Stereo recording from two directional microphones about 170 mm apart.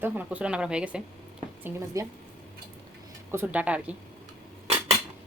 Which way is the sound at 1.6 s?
20° right (ahead or behind).